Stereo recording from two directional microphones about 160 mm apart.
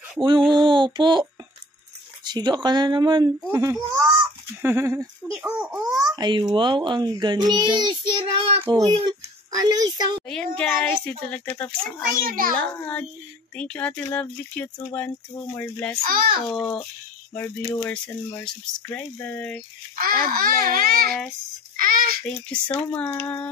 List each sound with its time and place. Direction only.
0.5 s a sound: 30° right (ahead or behind)
2.2 s a child's voice: 25° right (ahead or behind); by 5.9 s 5° right (ahead or behind)
6.1 s a child's voice: 30° right (ahead or behind)
10.2 s speech: 5° left (ahead or behind)
12.2 s a child's voice: 65° right (ahead or behind)
12.5 s speech: 10° left (ahead or behind)
16.0 s a child's voice: 65° right (ahead or behind)
16.4 s a child's voice: 5° left (ahead or behind)
20.0 s babbling: 70° right (ahead or behind)
21.7 s a sound: 65° right (ahead or behind)
22.5 s speech: 10° left (ahead or behind)